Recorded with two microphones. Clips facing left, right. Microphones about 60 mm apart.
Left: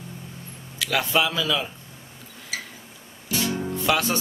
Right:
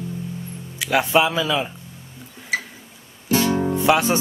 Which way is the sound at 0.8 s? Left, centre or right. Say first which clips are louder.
Right 5 dB; right.